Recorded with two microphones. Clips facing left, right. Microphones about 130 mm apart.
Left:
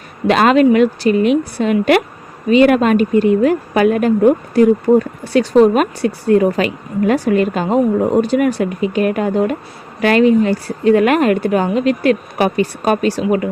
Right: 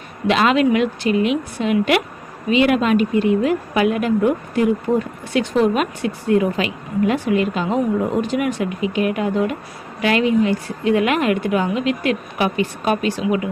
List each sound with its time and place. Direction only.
0.3 s a woman's voice: 45° left (ahead or behind)